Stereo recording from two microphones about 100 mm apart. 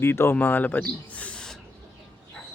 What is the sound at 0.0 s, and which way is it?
Speech, 25° left (ahead or behind).